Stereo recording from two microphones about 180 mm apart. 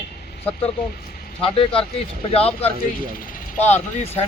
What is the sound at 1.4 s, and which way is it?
Speech, 30° left (ahead or behind).